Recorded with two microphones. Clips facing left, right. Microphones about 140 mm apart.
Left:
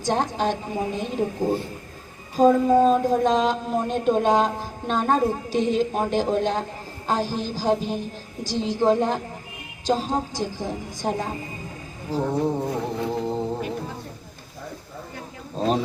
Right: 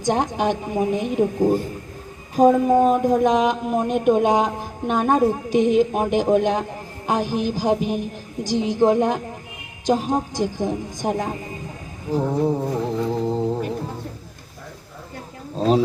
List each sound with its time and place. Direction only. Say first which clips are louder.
0.0 s a woman's voice: right 2 dB; 15° right (ahead or behind)
13.2 s music: right 4 dB; centre (ahead or behind)
15.5 s speech: right 4 dB; centre (ahead or behind)